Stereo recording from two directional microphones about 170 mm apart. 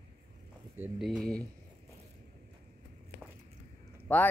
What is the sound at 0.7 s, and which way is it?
Speech, 5° right (ahead or behind).